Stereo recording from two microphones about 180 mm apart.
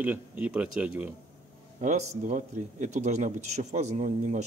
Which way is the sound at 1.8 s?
40° right (ahead or behind).